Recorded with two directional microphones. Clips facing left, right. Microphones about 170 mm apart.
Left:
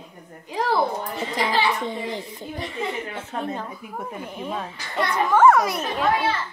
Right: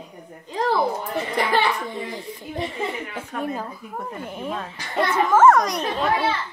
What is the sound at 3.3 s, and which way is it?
Speech, 30° left (ahead or behind).